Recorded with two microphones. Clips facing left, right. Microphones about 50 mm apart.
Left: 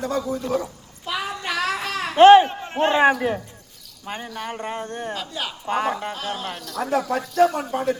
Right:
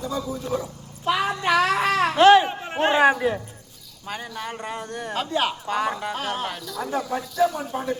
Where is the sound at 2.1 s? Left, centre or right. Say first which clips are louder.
Left 4 dB; left.